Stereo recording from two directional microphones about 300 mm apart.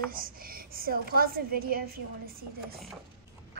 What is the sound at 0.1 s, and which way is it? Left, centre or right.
A woman's voice, right.